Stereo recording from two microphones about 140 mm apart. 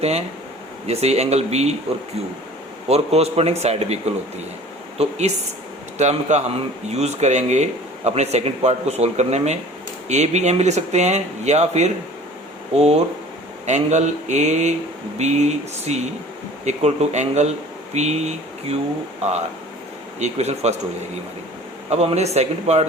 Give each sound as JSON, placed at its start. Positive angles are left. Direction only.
{"t": 0.0, "sound": "speech", "side_deg": -50}
{"t": 2.9, "sound": "speech", "side_deg": -50}
{"t": 21.8, "sound": "speech", "side_deg": -50}